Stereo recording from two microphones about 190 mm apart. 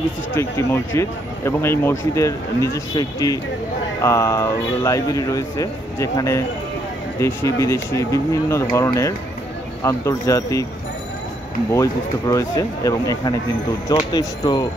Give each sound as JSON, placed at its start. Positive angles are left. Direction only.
{"t": 0.3, "sound": "speech", "side_deg": 15}
{"t": 11.7, "sound": "speech", "side_deg": 15}